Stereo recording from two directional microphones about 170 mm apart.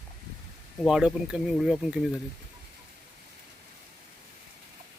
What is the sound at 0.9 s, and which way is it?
Speech, 5° right (ahead or behind).